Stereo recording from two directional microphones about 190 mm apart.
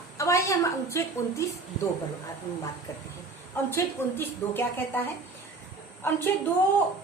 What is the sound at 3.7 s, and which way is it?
A woman's voice, 10° left (ahead or behind).